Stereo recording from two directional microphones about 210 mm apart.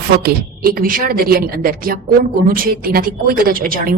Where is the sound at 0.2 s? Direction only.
45° right (ahead or behind).